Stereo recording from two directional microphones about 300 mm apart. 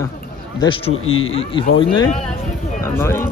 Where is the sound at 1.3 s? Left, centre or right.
Centre.